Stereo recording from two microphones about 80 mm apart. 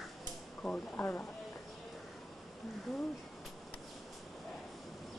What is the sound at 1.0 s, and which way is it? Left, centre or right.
Speech, left.